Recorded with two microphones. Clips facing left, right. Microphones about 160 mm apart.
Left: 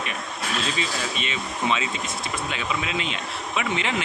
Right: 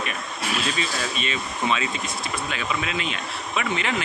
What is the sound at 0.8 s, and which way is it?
A man's voice, 20° left (ahead or behind).